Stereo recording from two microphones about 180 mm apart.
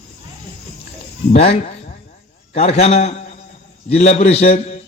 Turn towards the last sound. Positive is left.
turn(degrees=35)  # may be behind; listen again after turning